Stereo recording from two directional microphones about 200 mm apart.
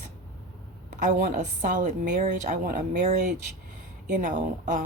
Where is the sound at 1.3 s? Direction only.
40° right (ahead or behind).